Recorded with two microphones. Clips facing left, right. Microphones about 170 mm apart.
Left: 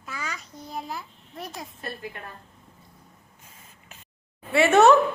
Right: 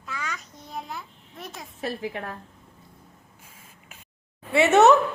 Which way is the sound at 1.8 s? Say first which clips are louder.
Right 10 dB; 90° right.